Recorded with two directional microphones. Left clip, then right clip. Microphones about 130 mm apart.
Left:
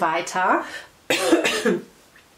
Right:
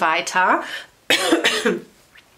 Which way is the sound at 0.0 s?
45° right (ahead or behind).